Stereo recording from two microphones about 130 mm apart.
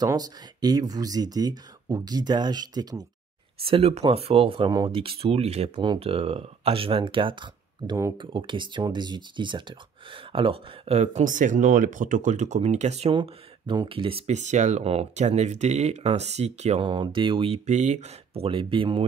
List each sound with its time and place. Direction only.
0.0 s speech: 30° right (ahead or behind)
3.5 s speech: 45° right (ahead or behind)
4.6 s speech: 30° right (ahead or behind)
4.9 s speech: 45° right (ahead or behind)
5.8 s speech: 40° right (ahead or behind); by 13.1 s 60° right (ahead or behind)
13.1 s speech: 40° right (ahead or behind)
14.2 s speech: 65° right (ahead or behind)
16.8 s speech: 35° right (ahead or behind)